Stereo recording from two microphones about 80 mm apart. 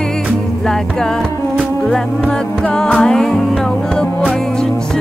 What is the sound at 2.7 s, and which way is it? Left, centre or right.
Music, centre.